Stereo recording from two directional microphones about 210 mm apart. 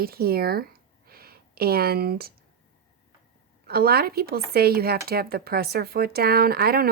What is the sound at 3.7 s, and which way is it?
Speech, 45° right (ahead or behind).